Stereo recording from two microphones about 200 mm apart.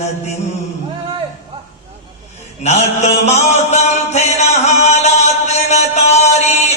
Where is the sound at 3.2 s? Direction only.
35° left (ahead or behind).